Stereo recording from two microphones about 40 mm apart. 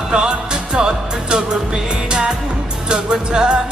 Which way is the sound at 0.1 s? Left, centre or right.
Centre.